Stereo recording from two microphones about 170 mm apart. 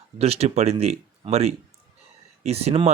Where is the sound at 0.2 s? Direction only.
40° right (ahead or behind).